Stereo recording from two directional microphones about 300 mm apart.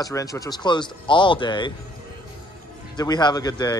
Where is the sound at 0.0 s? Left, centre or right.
Centre.